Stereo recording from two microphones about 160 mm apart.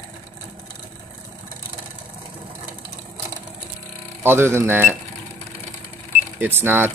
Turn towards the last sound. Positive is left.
turn(degrees=-15)  # may be behind; listen again after turning